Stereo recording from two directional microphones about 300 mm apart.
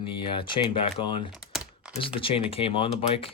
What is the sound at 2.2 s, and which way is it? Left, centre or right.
Speech, centre.